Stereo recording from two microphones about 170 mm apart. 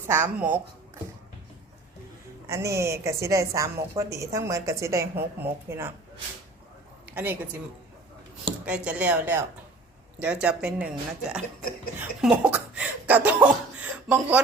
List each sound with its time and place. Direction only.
0.1 s a woman's voice: 10° right (ahead or behind)
2.5 s a woman's voice: 15° right (ahead or behind)
7.0 s a sound: 10° right (ahead or behind)
8.6 s a woman's voice: 5° right (ahead or behind)